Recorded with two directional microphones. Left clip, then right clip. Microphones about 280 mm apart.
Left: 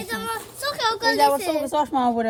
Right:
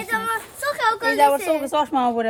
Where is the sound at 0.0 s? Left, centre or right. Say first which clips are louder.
Right 5 dB; centre.